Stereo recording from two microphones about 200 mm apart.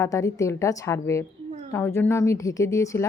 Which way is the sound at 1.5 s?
35° right (ahead or behind).